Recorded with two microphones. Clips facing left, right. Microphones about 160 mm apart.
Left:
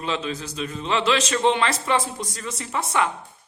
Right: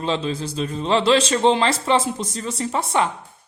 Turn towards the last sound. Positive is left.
turn(degrees=-30)  # may be behind; listen again after turning